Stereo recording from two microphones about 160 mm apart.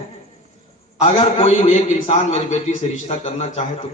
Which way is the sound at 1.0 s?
35° left (ahead or behind).